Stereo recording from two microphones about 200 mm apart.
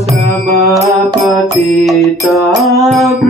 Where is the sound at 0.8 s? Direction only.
15° right (ahead or behind).